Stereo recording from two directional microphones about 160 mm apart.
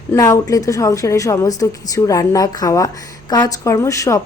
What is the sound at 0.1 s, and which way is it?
A woman's voice, 20° left (ahead or behind).